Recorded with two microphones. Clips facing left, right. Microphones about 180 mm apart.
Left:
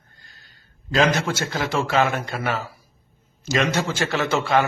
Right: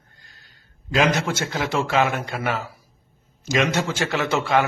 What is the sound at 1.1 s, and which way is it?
Speech, 15° right (ahead or behind).